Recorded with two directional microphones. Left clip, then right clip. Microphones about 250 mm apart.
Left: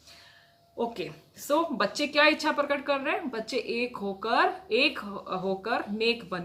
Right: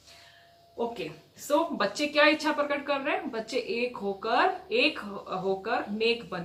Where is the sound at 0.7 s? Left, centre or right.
Left.